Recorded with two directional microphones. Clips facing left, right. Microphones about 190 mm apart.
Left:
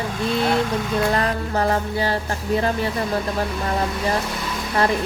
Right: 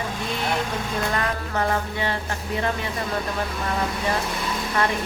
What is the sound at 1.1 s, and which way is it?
Music, 35° left (ahead or behind).